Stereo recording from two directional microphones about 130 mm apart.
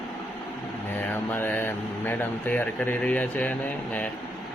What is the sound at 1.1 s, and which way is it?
Speech, 15° left (ahead or behind).